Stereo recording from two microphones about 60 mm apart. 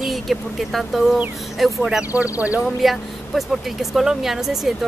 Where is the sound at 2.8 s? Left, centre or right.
Centre.